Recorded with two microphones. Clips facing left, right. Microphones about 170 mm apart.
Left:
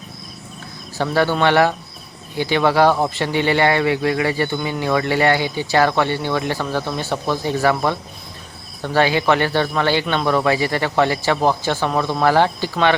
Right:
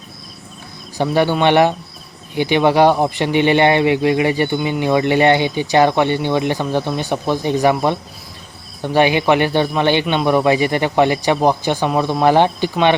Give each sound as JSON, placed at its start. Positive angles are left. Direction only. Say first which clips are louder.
{"t": 0.9, "sound": "speech", "louder": "right 2 dB", "side_deg": -15}